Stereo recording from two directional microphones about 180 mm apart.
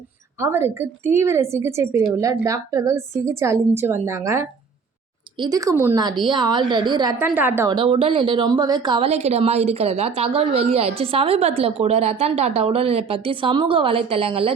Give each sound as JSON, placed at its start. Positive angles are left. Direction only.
{"t": 0.3, "sound": "a woman's voice", "side_deg": -15}
{"t": 7.3, "sound": "a woman's voice", "side_deg": -10}
{"t": 7.7, "sound": "a woman's voice", "side_deg": -30}